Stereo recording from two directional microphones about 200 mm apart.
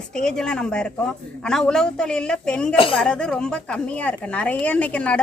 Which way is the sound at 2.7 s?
25° left (ahead or behind).